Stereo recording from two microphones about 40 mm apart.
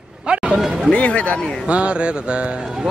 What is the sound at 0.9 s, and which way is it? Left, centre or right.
Speech, left.